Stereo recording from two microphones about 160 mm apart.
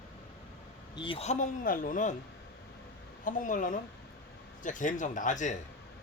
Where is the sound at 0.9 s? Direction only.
35° left (ahead or behind); by 2.1 s 55° left (ahead or behind).